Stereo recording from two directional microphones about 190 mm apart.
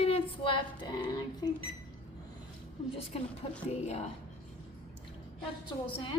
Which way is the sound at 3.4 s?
30° left (ahead or behind).